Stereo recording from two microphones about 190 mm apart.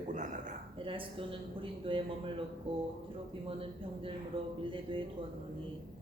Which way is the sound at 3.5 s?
30° right (ahead or behind).